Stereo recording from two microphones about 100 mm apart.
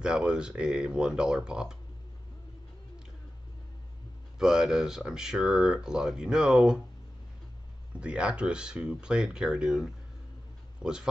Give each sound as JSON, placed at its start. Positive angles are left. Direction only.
{"t": 0.0, "sound": "speech", "side_deg": -10}
{"t": 4.4, "sound": "speech", "side_deg": -5}
{"t": 8.0, "sound": "a man's voice", "side_deg": -10}